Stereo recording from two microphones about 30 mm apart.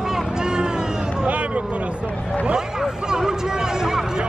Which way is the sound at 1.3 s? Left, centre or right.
Right.